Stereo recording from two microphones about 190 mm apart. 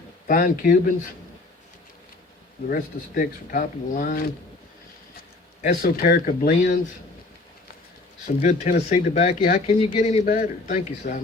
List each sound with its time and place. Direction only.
0.3 s speech: 45° left (ahead or behind)
2.6 s speech: 45° left (ahead or behind)
5.6 s speech: 55° left (ahead or behind)
8.4 s speech: 40° left (ahead or behind)